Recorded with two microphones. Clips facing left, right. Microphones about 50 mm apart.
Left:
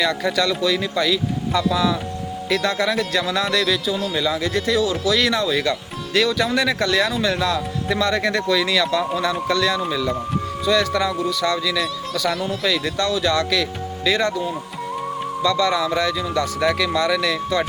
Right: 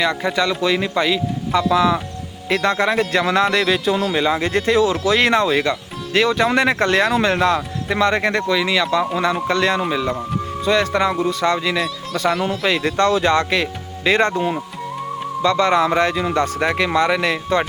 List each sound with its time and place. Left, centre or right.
0.0 s speech: right
9.9 s speech: right
15.4 s speech: right